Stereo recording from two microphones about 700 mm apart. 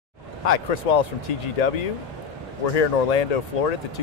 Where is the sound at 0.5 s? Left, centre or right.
Left.